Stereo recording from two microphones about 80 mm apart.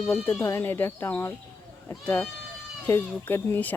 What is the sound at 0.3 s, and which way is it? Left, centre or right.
Speech, left.